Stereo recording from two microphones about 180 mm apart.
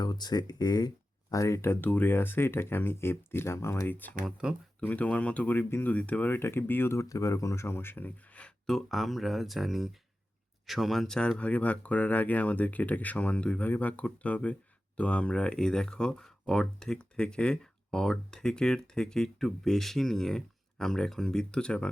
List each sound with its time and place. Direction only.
0.0 s speech: 20° left (ahead or behind)
4.4 s speech: 5° right (ahead or behind)
4.8 s speech: 10° left (ahead or behind)